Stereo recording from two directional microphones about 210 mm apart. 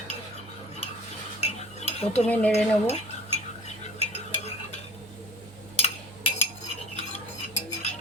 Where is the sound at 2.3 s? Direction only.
5° left (ahead or behind).